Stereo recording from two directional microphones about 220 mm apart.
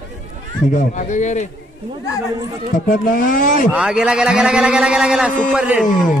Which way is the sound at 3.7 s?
5° right (ahead or behind).